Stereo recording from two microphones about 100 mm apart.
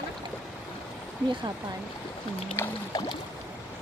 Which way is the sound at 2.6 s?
25° left (ahead or behind).